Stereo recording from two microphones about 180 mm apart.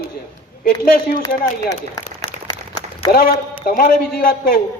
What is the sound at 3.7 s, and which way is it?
Speech, 55° left (ahead or behind).